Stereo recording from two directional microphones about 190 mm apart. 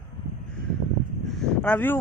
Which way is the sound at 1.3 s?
5° left (ahead or behind).